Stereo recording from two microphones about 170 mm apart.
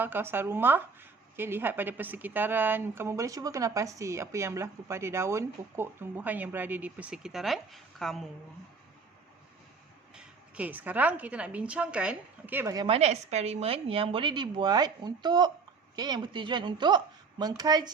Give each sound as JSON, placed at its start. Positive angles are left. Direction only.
{"t": 0.0, "sound": "a woman's voice", "side_deg": -10}
{"t": 10.2, "sound": "a woman's voice", "side_deg": -10}
{"t": 12.9, "sound": "speech", "side_deg": -40}